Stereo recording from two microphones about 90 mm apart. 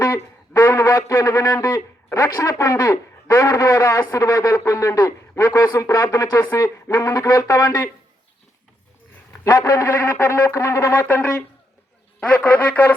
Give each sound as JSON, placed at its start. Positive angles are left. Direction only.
{"t": 0.0, "sound": "speech", "side_deg": 30}
{"t": 9.4, "sound": "speech", "side_deg": 35}
{"t": 11.0, "sound": "speech", "side_deg": 15}